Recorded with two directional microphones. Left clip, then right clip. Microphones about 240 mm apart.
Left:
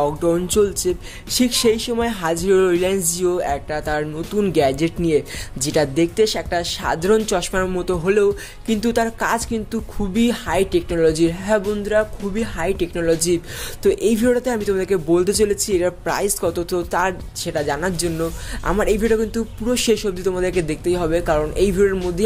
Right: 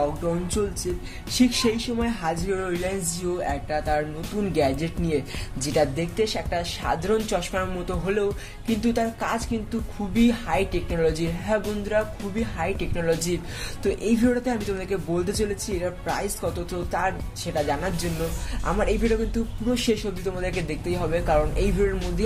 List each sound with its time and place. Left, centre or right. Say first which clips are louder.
0.6 s speech: left 9 dB; left